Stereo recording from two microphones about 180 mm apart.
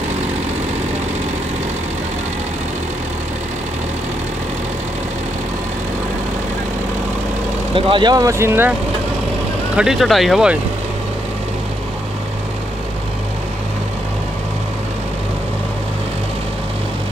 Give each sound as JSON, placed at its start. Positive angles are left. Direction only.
{"t": 7.7, "sound": "speech", "side_deg": -25}
{"t": 9.8, "sound": "speech", "side_deg": 0}